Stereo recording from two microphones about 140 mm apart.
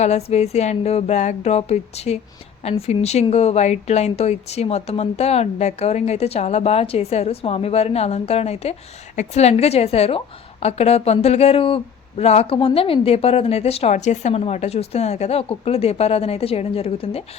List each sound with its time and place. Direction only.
0.0 s a woman's voice: 50° left (ahead or behind)